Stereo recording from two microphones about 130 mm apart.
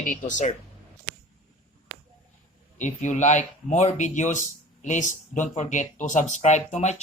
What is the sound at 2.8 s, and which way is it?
Speech, 70° left (ahead or behind).